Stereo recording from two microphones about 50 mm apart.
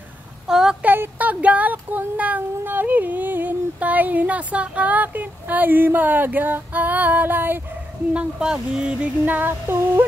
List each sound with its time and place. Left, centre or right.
0.5 s a sound: centre
0.8 s speech: right
1.1 s speech: right
8.1 s speech: centre
9.2 s yodeling: right